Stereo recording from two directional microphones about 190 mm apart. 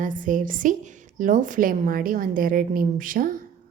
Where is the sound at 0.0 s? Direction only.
45° right (ahead or behind).